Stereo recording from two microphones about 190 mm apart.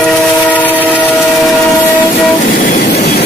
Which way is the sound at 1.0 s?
10° left (ahead or behind).